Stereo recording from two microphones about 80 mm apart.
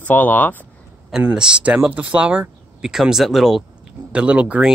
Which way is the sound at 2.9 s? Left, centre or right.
Centre.